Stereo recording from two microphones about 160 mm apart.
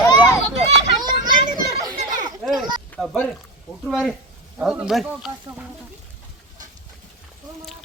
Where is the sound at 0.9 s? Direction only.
25° right (ahead or behind).